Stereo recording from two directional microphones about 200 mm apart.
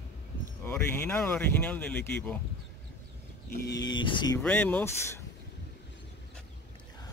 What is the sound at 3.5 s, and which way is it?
Speech, 55° left (ahead or behind).